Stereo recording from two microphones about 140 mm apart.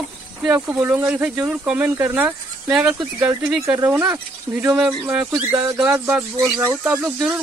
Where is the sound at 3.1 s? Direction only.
20° right (ahead or behind).